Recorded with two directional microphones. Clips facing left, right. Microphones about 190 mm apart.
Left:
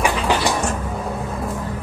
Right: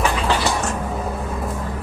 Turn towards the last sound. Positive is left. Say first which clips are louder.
# left 1 dB
turn(degrees=15)  # may be behind; listen again after turning